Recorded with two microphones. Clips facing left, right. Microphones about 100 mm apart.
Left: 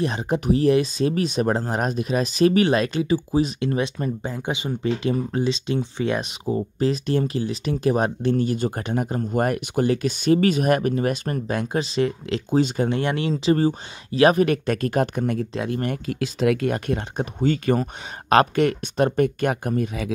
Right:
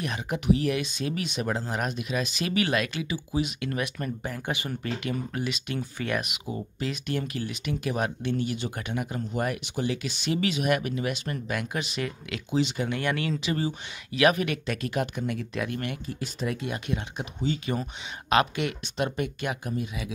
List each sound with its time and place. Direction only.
0.0 s speech: 30° left (ahead or behind)
12.4 s speech: 45° left (ahead or behind)
12.9 s speech: 25° left (ahead or behind)
13.6 s speech: 40° left (ahead or behind)
15.5 s speech: 25° left (ahead or behind)
16.1 s speech: 90° left
16.6 s speech: 50° left (ahead or behind)